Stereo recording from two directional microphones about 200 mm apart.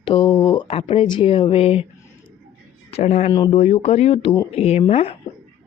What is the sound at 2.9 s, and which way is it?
Speech, 35° left (ahead or behind).